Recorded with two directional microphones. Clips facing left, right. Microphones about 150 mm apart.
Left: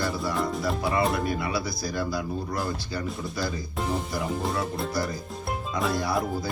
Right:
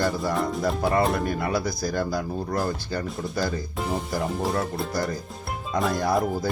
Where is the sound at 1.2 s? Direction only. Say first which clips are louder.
Right 2 dB; 45° right (ahead or behind).